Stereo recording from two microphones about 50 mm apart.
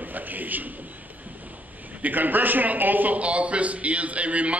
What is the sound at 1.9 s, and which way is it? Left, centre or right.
A man's voice, right.